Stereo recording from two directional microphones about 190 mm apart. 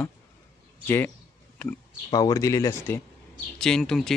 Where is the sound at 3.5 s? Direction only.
5° left (ahead or behind).